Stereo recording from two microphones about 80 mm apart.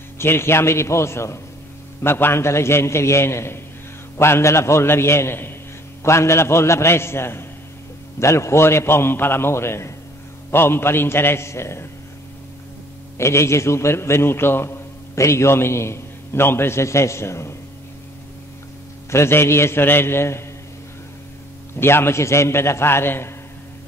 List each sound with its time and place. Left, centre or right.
0.2 s a man's voice: left
13.2 s a man's voice: left
19.0 s a man's voice: left
21.7 s a man's voice: left